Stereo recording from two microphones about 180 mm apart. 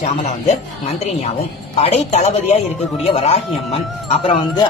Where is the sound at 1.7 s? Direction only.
35° left (ahead or behind).